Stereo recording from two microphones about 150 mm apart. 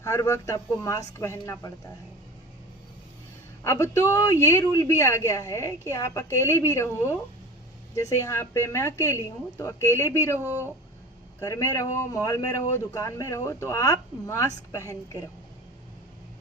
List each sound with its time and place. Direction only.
0.0 s speech: 20° left (ahead or behind)
3.6 s a woman's voice: 20° left (ahead or behind)
10.4 s speech: 15° right (ahead or behind)
11.3 s speech: 20° left (ahead or behind)